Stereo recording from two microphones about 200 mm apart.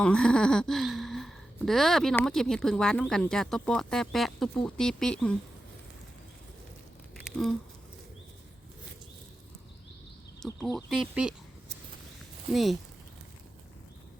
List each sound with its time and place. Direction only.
0.0 s speech: 5° left (ahead or behind)
7.3 s a sound: centre (ahead or behind)
10.7 s speech: centre (ahead or behind)